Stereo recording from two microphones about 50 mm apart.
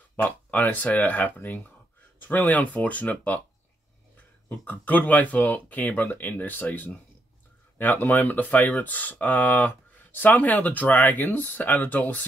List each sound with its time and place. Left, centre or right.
0.5 s speech: left
4.5 s speech: left